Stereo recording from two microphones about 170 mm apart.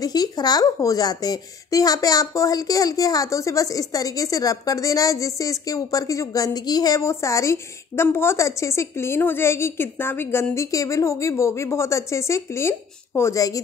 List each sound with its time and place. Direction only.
0.0 s speech: 20° left (ahead or behind)